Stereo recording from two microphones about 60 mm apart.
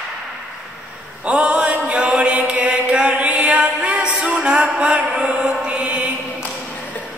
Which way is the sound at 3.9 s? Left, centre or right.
Right.